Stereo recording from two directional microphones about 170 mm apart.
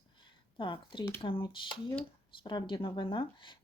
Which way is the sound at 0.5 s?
30° left (ahead or behind).